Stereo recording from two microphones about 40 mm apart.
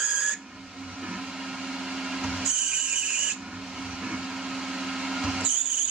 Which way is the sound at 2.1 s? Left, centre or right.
Centre.